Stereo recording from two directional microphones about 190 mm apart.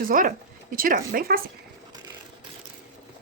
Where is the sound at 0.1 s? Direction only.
45° right (ahead or behind).